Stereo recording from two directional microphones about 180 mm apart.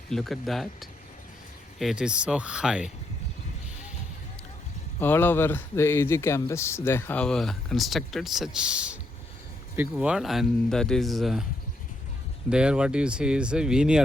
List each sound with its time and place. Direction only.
0.1 s speech: centre (ahead or behind)
4.9 s speech: 10° left (ahead or behind)
12.5 s speech: 5° right (ahead or behind)